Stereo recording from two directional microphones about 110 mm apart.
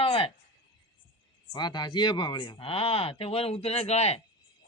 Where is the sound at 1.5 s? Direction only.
40° left (ahead or behind).